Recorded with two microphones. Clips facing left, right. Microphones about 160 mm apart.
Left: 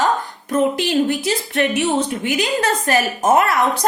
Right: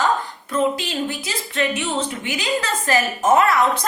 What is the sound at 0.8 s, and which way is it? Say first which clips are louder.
A woman's voice: left 8 dB; 65° left (ahead or behind).